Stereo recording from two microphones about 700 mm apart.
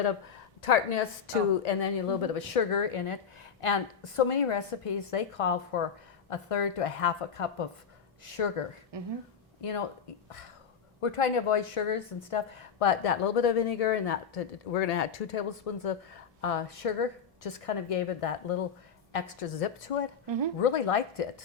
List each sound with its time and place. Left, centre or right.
0.6 s a woman's voice: left
8.9 s speech: right
9.6 s speech: left
11.0 s a woman's voice: left